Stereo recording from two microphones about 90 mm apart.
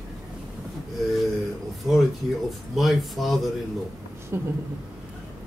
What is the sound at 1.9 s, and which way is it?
Speech, centre (ahead or behind).